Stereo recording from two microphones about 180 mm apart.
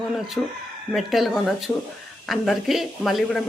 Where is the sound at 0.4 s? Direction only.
10° left (ahead or behind).